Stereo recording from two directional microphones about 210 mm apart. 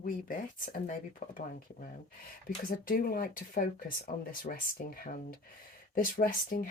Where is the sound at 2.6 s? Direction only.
45° left (ahead or behind).